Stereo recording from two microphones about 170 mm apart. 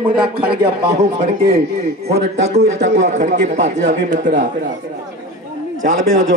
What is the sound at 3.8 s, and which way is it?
Speech, 90° right.